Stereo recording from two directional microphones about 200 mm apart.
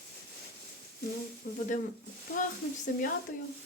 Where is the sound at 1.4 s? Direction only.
45° left (ahead or behind).